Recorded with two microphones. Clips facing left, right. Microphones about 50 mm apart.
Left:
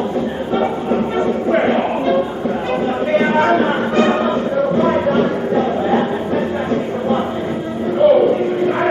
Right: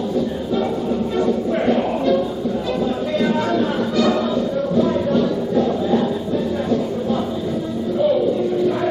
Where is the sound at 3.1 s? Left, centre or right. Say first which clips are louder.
Left 6 dB; left.